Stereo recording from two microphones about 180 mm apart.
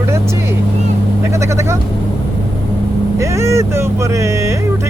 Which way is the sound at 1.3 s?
15° right (ahead or behind).